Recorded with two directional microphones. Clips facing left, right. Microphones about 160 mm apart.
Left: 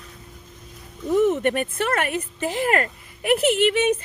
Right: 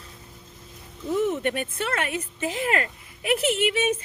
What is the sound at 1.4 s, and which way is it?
Speech, 50° left (ahead or behind).